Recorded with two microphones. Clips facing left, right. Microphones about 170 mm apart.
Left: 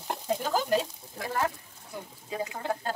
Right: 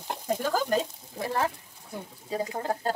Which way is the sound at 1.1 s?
30° right (ahead or behind).